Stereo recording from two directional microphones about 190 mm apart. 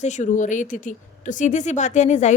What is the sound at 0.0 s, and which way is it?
Speech, 40° left (ahead or behind).